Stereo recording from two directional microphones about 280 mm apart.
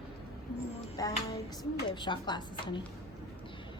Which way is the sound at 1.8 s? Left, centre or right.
Centre.